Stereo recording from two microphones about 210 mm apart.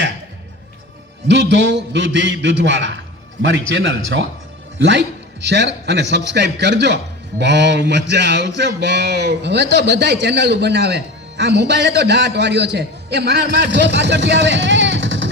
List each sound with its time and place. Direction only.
1.3 s a man's voice: 60° right (ahead or behind)